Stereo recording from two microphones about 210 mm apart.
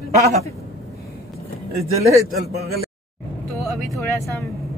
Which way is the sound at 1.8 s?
30° right (ahead or behind).